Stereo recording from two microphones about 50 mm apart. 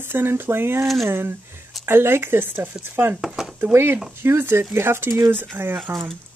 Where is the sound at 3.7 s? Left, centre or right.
Right.